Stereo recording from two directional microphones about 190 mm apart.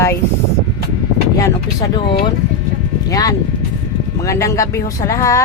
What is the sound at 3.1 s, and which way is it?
Speech, 20° left (ahead or behind).